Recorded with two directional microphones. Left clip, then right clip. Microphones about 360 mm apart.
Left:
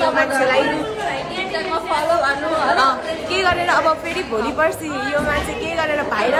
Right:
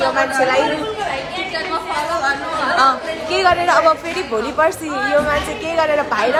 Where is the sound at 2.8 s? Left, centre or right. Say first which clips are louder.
Right 2 dB; centre.